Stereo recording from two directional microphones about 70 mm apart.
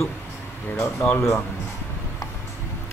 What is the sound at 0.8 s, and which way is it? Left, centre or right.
Speech, left.